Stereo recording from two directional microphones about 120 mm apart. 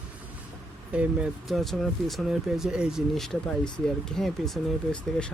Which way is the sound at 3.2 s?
5° left (ahead or behind).